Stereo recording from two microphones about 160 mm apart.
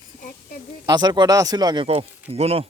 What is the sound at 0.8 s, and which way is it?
Speech, 25° right (ahead or behind).